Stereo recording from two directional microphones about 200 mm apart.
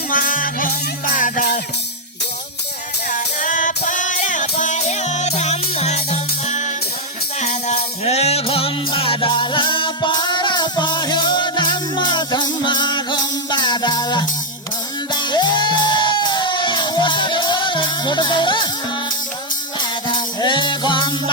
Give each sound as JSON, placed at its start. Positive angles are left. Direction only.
{"t": 0.1, "sound": "music", "side_deg": 45}
{"t": 3.1, "sound": "music", "side_deg": 40}
{"t": 20.4, "sound": "music", "side_deg": 25}